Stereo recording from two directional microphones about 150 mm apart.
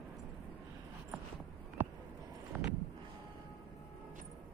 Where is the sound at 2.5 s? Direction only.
10° right (ahead or behind).